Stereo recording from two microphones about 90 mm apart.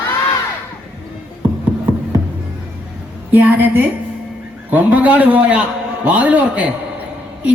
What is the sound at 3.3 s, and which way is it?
A man's voice, 20° right (ahead or behind).